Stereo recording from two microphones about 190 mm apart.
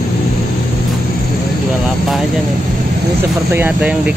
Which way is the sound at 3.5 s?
10° right (ahead or behind).